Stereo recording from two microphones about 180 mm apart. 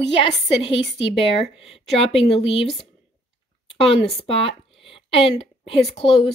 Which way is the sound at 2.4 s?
30° left (ahead or behind).